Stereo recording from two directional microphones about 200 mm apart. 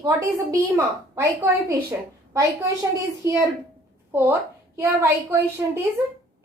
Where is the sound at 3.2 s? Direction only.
15° right (ahead or behind).